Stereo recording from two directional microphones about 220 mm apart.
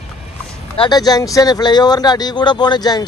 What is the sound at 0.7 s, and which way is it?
Speech, 20° left (ahead or behind).